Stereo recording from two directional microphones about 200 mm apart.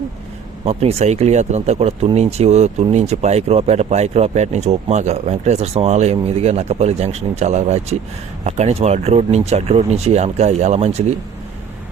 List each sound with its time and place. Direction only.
0.6 s speech: 30° right (ahead or behind)